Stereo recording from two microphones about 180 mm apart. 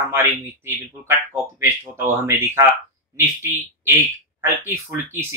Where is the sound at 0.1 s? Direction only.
15° right (ahead or behind).